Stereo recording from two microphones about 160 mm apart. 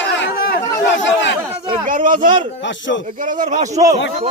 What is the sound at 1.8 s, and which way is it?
A man's voice, 55° right (ahead or behind).